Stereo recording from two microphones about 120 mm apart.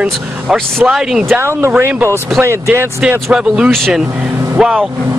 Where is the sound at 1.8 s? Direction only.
15° right (ahead or behind).